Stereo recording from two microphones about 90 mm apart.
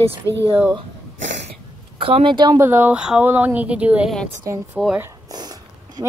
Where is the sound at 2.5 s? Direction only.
25° right (ahead or behind).